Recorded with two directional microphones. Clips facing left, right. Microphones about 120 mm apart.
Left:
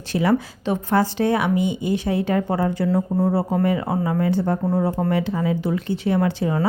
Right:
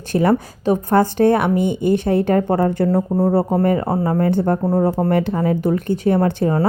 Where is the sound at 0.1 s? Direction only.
50° right (ahead or behind).